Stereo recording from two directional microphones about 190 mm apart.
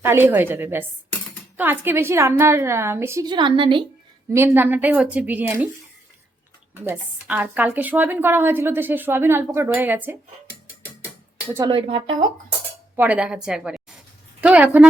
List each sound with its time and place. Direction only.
0.0 s speech: 10° right (ahead or behind)
4.3 s speech: 10° right (ahead or behind)
6.8 s speech: 10° right (ahead or behind)
11.7 s speech: 30° right (ahead or behind)
13.0 s a woman's voice: 5° right (ahead or behind)
14.4 s a sound: 10° right (ahead or behind)